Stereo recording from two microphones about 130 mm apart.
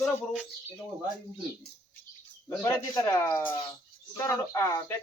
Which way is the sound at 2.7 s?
20° left (ahead or behind).